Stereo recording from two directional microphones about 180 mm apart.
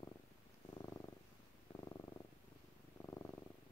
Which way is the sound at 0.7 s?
20° left (ahead or behind).